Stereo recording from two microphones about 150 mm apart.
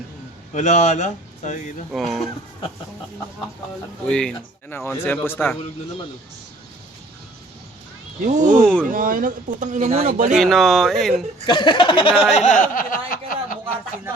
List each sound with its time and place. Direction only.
0.5 s speech: 55° left (ahead or behind)
1.9 s speech: centre (ahead or behind)
4.0 s speech: 5° left (ahead or behind)
4.7 s speech: 15° left (ahead or behind)
8.2 s speech: 55° right (ahead or behind)
8.9 s speech: 65° right (ahead or behind); by 10.3 s 50° right (ahead or behind)
10.3 s speech: centre (ahead or behind)
11.4 s a sound: 30° left (ahead or behind)
12.3 s a sound: 55° left (ahead or behind); by 13.6 s 70° left (ahead or behind)